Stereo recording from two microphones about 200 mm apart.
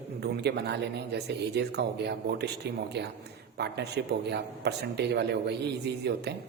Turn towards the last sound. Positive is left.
turn(degrees=-55)  # may be behind; listen again after turning